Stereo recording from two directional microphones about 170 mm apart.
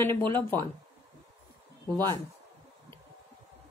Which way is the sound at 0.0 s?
15° left (ahead or behind).